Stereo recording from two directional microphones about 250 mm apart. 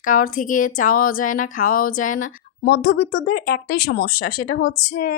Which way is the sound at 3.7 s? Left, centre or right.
Left.